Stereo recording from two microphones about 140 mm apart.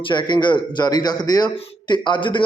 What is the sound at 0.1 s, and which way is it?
A man's voice, 35° left (ahead or behind).